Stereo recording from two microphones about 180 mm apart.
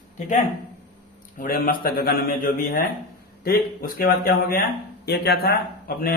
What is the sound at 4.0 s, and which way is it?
Speech, 55° left (ahead or behind).